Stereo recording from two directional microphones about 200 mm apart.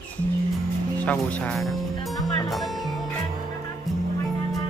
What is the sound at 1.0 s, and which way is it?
Speech, 5° left (ahead or behind).